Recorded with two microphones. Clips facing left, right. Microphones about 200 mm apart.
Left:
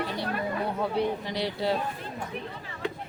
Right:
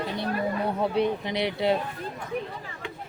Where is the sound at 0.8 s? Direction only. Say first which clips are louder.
Right 3 dB; 20° right (ahead or behind).